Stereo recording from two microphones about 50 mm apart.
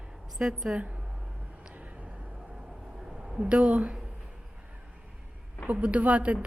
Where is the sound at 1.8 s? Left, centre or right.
Right.